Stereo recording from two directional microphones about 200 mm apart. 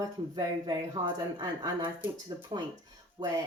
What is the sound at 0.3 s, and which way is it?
Speech, 20° right (ahead or behind).